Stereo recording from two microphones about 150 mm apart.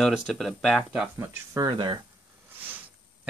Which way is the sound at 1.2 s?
25° right (ahead or behind).